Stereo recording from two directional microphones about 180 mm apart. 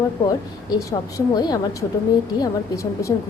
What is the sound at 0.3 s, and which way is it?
A woman's voice, 20° left (ahead or behind).